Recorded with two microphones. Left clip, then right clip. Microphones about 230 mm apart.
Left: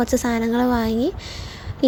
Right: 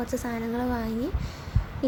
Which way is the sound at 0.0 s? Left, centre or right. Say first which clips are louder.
Left 10 dB; left.